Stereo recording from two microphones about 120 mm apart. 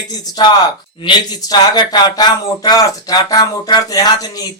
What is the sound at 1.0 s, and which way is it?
Speech, 35° left (ahead or behind).